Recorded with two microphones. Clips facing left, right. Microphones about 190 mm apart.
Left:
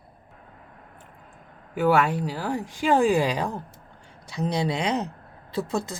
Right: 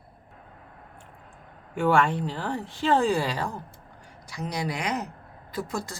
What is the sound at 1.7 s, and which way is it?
A woman's voice, 5° left (ahead or behind).